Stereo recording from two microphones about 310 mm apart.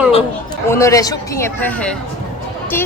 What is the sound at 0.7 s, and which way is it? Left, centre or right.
Speech, centre.